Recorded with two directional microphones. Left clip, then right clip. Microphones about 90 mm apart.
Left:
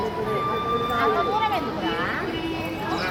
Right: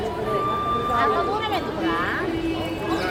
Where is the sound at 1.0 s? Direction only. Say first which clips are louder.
Left 1 dB; 15° left (ahead or behind).